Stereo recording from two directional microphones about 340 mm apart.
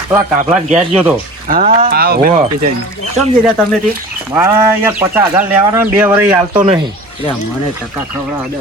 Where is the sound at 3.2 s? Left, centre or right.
Centre.